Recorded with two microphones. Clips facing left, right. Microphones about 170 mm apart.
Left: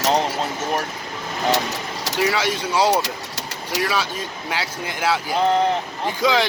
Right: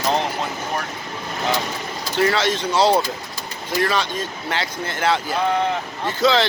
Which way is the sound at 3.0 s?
80° left.